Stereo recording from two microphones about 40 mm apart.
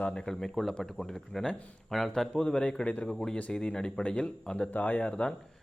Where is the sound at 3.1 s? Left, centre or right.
Centre.